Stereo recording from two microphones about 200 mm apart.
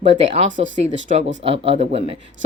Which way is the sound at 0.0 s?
35° right (ahead or behind).